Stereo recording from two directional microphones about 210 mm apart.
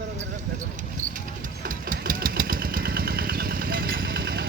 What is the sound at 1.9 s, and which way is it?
Vehicle, 40° right (ahead or behind).